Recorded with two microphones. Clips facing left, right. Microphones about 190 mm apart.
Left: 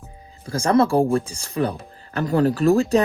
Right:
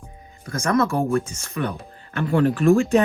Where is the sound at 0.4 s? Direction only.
30° left (ahead or behind).